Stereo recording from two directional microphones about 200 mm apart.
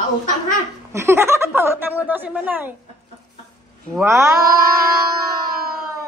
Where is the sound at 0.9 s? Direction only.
15° right (ahead or behind).